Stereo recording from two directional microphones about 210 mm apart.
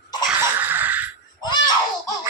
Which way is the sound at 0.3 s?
10° right (ahead or behind).